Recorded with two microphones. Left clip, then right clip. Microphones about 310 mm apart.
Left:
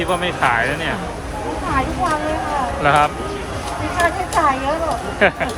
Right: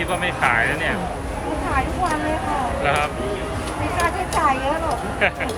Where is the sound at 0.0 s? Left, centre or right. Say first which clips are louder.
Left 3 dB; centre.